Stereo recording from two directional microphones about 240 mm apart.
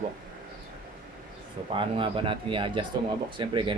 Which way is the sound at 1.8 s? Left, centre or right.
Right.